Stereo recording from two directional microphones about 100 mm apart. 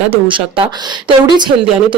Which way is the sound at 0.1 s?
60° right (ahead or behind).